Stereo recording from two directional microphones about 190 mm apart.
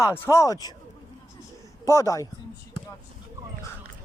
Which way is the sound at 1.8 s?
15° left (ahead or behind).